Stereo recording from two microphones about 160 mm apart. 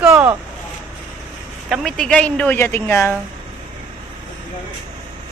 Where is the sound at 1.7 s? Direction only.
Centre (ahead or behind).